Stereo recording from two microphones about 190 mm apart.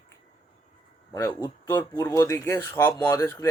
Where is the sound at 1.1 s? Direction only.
15° left (ahead or behind).